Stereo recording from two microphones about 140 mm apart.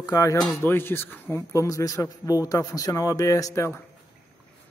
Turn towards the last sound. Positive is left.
turn(degrees=20)  # may be behind; listen again after turning